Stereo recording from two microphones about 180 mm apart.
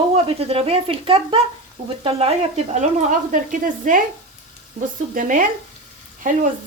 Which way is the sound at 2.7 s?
45° right (ahead or behind).